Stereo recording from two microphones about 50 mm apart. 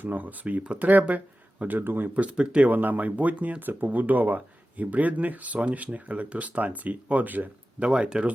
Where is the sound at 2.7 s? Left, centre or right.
Right.